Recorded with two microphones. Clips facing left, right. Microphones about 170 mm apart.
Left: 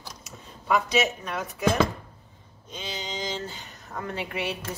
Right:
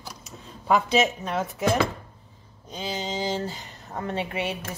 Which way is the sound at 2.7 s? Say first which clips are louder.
Right 5 dB; 35° right (ahead or behind).